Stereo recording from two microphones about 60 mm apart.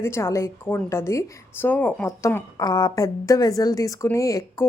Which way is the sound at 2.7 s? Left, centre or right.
Left.